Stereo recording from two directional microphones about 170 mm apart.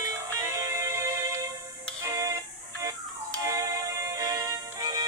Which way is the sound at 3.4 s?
20° right (ahead or behind).